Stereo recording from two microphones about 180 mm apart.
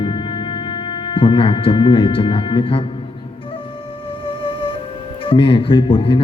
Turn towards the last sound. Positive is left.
turn(degrees=30)  # may be behind; listen again after turning